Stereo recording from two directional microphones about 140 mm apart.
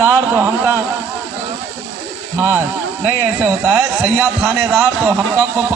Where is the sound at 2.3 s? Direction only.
15° right (ahead or behind).